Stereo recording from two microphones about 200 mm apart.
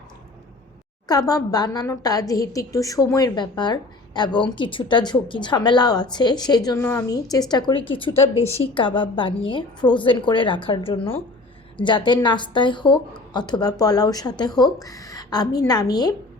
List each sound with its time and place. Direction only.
1.0 s a woman's voice: 20° left (ahead or behind)